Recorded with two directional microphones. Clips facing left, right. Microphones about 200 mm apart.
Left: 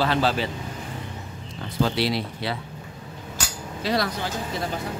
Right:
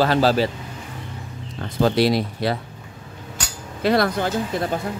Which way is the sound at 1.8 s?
45° right (ahead or behind).